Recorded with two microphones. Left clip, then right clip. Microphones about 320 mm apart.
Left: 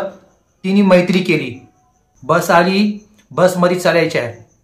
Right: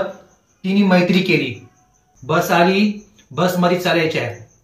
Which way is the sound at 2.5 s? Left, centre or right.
Centre.